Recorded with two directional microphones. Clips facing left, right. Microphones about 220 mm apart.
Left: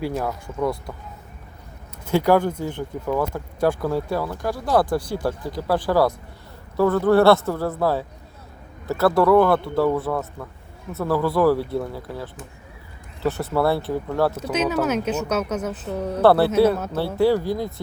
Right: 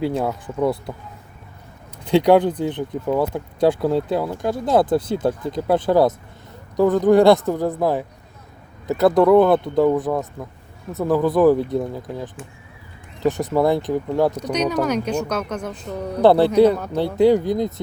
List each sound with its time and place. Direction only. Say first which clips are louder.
0.0 s speech: right 4 dB; 20° right (ahead or behind)
2.0 s speech: right 4 dB; 20° right (ahead or behind)
14.5 s a woman's voice: right 1 dB; 5° left (ahead or behind)
16.2 s speech: right 3 dB; 15° right (ahead or behind)